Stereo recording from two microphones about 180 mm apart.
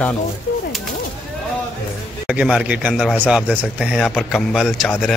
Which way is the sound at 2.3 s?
5° right (ahead or behind).